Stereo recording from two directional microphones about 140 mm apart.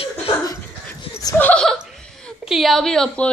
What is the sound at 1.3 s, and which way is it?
A woman's voice, 10° left (ahead or behind).